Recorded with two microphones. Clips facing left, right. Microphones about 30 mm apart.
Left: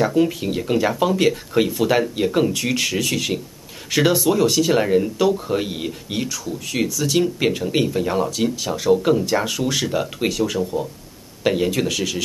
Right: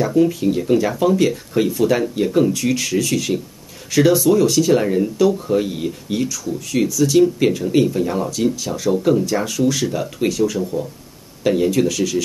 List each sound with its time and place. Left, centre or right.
0.0 s speech: left